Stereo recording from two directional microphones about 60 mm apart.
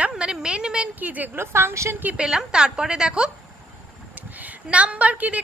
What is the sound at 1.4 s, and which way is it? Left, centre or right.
Speech, right.